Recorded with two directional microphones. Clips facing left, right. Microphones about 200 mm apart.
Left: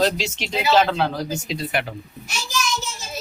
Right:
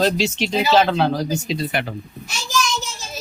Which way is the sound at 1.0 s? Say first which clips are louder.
Right 5 dB; 30° right (ahead or behind).